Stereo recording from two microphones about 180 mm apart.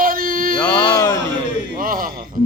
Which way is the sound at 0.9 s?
20° left (ahead or behind).